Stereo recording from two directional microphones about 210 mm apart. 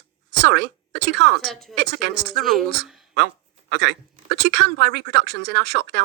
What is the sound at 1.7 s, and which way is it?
Speech, 55° right (ahead or behind).